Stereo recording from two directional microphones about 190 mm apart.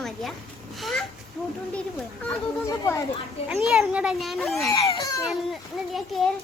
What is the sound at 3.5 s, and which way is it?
A child's voice, centre (ahead or behind).